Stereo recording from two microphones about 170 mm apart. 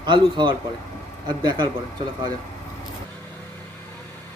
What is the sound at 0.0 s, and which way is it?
A man's voice, 30° right (ahead or behind).